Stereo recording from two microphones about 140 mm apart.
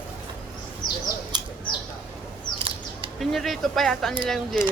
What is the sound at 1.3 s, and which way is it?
Bird, 30° right (ahead or behind).